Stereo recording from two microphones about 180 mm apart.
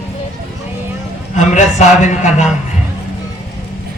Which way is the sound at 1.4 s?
40° left (ahead or behind).